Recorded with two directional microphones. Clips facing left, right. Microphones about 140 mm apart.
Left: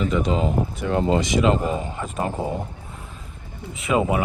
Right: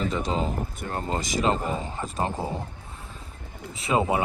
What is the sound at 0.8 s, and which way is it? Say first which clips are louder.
Speech: left 11 dB; 45° right (ahead or behind).